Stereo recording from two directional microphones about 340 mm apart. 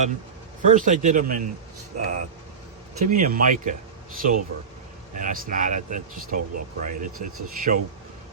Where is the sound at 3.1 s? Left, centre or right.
Right.